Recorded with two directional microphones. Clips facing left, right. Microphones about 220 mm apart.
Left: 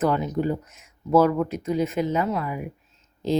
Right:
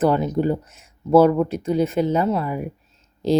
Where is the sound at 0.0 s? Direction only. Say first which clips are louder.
Right 4 dB; 30° right (ahead or behind).